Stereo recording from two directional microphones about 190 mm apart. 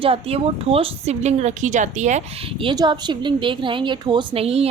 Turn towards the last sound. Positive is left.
turn(degrees=-30)  # may be behind; listen again after turning